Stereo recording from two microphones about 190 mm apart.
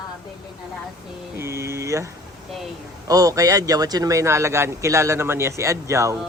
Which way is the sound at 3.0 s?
20° right (ahead or behind).